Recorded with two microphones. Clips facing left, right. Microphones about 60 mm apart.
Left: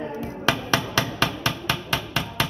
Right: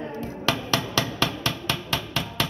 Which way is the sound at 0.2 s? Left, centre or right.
Centre.